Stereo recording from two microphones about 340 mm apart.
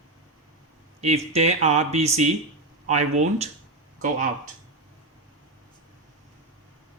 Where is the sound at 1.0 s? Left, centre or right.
Centre.